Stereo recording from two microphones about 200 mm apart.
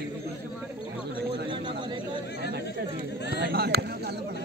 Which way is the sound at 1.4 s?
25° right (ahead or behind).